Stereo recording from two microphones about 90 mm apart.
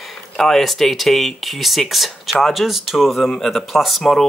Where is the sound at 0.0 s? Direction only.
Centre (ahead or behind).